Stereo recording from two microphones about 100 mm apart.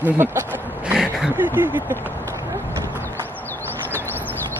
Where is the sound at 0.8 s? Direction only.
10° right (ahead or behind).